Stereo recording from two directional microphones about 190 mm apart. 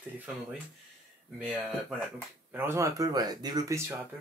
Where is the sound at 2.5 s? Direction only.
10° right (ahead or behind).